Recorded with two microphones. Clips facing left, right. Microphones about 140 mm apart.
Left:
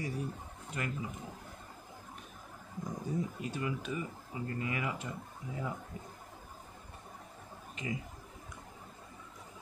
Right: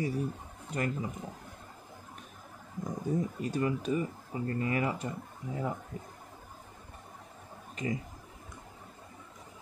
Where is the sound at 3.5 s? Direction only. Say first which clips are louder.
Right 8 dB; 40° right (ahead or behind).